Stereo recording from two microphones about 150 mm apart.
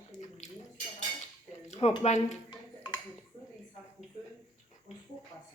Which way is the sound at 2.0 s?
50° left (ahead or behind).